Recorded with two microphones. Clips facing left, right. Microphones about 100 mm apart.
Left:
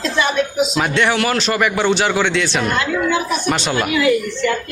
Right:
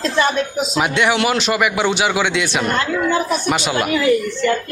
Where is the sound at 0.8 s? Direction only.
15° right (ahead or behind).